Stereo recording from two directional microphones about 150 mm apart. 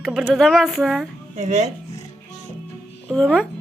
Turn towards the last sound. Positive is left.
turn(degrees=5)  # may be behind; listen again after turning